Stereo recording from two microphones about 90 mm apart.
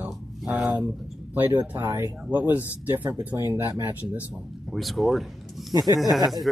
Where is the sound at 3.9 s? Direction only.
20° right (ahead or behind).